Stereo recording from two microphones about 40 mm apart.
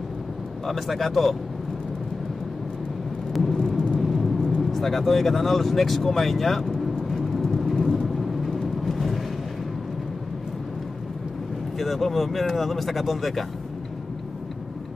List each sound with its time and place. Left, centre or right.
0.7 s speech: centre
3.5 s vehicle: centre
4.6 s speech: centre
7.1 s vehicle: centre
7.4 s vehicle: centre
11.8 s speech: centre